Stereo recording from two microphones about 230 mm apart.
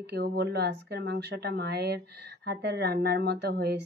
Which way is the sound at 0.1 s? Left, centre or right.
Right.